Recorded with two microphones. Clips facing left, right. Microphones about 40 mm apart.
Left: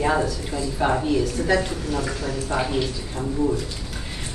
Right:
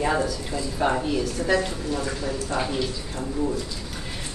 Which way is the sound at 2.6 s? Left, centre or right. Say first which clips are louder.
Left 3 dB; centre.